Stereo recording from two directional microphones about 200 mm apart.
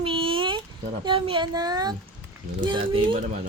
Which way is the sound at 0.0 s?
25° right (ahead or behind).